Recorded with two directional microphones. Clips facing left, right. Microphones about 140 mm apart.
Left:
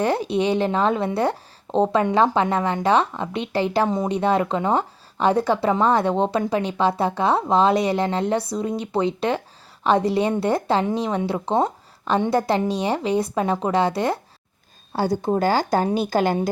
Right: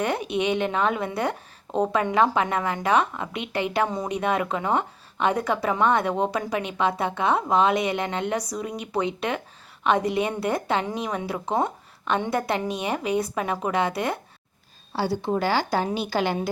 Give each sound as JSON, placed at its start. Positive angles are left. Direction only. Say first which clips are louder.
{"t": 0.0, "sound": "a woman's voice", "louder": "left 4 dB", "side_deg": 30}
{"t": 14.9, "sound": "a woman's voice", "louder": "left 4 dB", "side_deg": 45}